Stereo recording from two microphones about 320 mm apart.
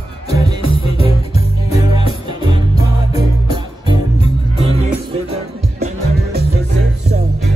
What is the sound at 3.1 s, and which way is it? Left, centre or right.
Music, centre.